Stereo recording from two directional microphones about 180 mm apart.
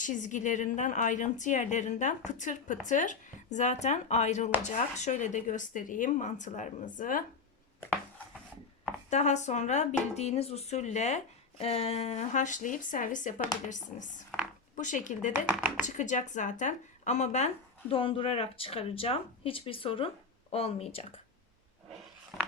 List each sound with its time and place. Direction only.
0.0 s a woman's voice: 45° left (ahead or behind)
9.0 s a woman's voice: 40° left (ahead or behind)
15.5 s speech: 5° right (ahead or behind)
15.9 s speech: 45° left (ahead or behind)